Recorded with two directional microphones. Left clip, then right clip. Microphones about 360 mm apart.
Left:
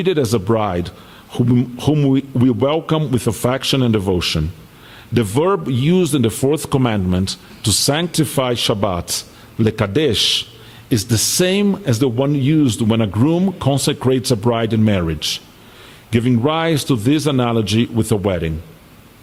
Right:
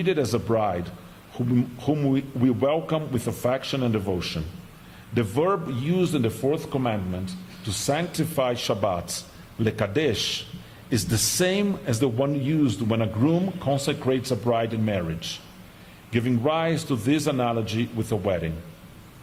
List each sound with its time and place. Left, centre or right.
0.0 s a man's voice: left
6.7 s speech: left
7.6 s speech: left